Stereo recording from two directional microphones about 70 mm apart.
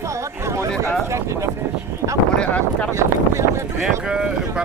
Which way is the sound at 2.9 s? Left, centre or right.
Right.